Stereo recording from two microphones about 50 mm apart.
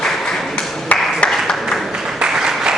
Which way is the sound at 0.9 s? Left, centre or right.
Left.